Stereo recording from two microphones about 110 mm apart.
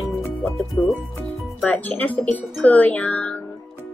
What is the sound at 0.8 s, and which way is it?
Speech, 5° left (ahead or behind).